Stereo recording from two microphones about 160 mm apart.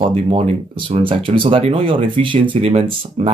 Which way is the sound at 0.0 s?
40° right (ahead or behind).